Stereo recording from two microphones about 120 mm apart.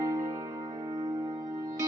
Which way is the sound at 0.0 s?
30° right (ahead or behind).